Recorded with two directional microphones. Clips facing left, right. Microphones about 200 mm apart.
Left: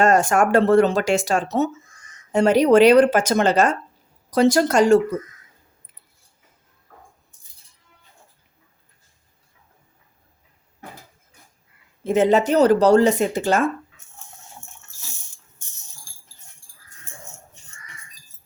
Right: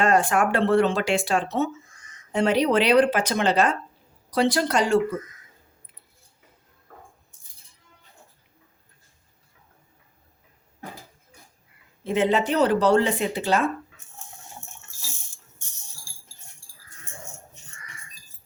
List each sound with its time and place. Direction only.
0.0 s speech: 45° left (ahead or behind)
12.0 s speech: 45° left (ahead or behind)